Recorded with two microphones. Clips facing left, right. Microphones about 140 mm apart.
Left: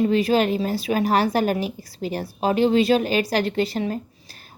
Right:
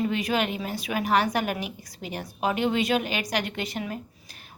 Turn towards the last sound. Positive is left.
turn(degrees=30)  # may be behind; listen again after turning